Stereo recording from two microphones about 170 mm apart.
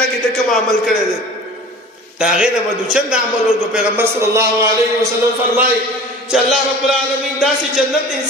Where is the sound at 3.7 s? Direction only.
15° right (ahead or behind).